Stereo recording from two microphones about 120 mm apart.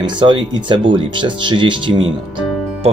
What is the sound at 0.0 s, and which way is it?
Speech, 40° right (ahead or behind).